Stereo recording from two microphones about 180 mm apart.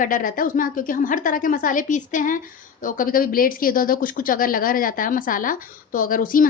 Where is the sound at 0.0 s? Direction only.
50° left (ahead or behind).